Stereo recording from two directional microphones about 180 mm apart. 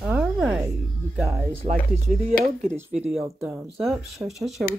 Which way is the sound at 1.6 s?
30° right (ahead or behind).